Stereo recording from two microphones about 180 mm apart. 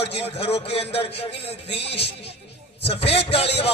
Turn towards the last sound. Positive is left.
turn(degrees=35)  # may be behind; listen again after turning